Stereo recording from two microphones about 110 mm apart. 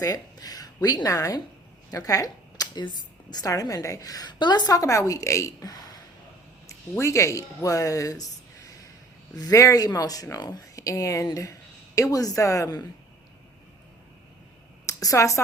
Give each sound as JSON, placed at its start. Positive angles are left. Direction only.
{"t": 0.0, "sound": "a woman's voice", "side_deg": 35}
{"t": 7.0, "sound": "a woman's voice", "side_deg": 30}
{"t": 14.8, "sound": "a woman's voice", "side_deg": 30}